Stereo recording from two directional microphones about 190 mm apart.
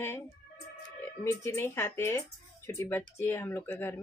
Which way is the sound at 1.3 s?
15° left (ahead or behind).